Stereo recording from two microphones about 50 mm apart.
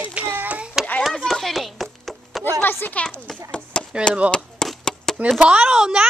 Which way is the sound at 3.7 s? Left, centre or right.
Centre.